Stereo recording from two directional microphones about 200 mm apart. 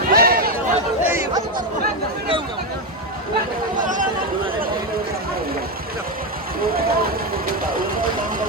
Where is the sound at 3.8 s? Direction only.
40° right (ahead or behind).